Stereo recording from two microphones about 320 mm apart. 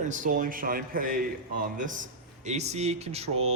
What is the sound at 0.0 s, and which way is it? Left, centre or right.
A man's voice, right.